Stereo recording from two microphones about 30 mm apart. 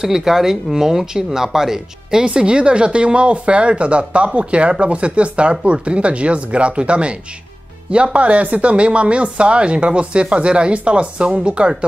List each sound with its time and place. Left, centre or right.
0.0 s speech: centre
2.2 s speech: right